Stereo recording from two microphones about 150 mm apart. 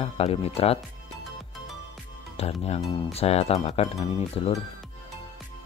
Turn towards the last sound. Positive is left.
turn(degrees=45)  # may be behind; listen again after turning